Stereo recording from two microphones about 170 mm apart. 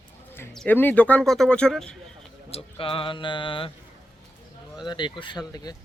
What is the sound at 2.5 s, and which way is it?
Speech, 30° left (ahead or behind).